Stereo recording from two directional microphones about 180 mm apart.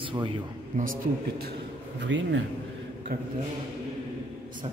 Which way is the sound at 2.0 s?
90° right.